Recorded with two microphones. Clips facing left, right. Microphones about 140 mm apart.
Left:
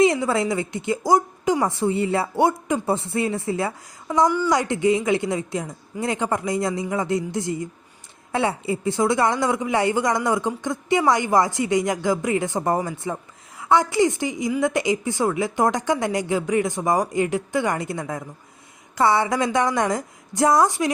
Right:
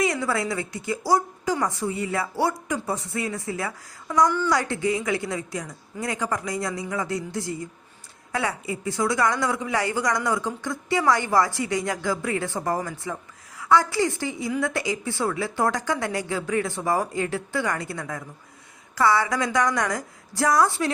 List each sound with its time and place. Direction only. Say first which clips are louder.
0.0 s speech: left 6 dB; 25° left (ahead or behind)